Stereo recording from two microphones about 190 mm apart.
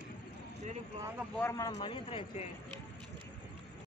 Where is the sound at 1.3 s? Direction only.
15° left (ahead or behind).